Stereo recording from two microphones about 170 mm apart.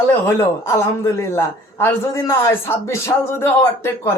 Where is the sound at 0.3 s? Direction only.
15° left (ahead or behind).